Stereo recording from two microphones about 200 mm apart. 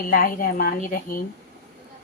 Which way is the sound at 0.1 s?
45° left (ahead or behind).